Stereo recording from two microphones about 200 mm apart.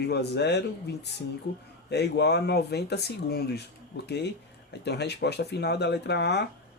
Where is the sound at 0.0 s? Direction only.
55° left (ahead or behind).